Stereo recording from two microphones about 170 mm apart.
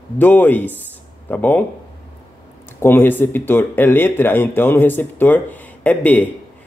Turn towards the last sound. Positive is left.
turn(degrees=10)  # may be behind; listen again after turning